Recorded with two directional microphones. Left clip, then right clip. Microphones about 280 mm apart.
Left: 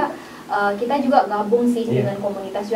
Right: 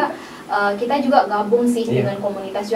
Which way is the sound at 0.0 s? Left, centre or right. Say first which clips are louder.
Right 2 dB; centre.